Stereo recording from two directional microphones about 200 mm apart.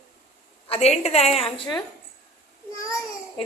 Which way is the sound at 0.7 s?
30° left (ahead or behind).